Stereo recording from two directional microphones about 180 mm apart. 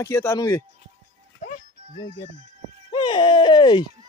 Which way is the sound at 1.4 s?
45° left (ahead or behind).